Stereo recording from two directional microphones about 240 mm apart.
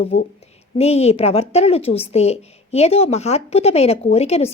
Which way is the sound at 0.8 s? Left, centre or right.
Left.